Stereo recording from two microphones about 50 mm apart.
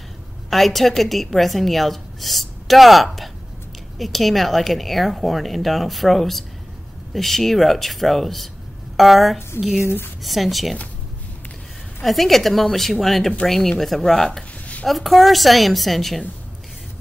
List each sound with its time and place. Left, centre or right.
0.5 s a woman's voice: centre
9.8 s speech: left
10.2 s a woman's voice: centre
12.0 s a woman's voice: centre